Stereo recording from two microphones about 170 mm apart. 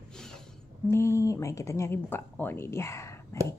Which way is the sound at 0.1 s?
Centre (ahead or behind).